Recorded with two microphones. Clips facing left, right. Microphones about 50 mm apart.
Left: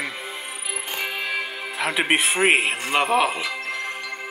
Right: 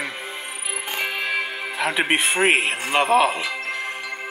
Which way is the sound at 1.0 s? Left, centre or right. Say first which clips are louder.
Right 3 dB; centre.